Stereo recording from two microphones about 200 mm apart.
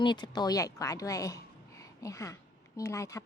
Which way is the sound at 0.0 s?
20° left (ahead or behind).